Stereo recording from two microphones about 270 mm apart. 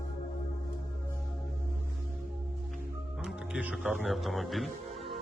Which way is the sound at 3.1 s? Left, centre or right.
Centre.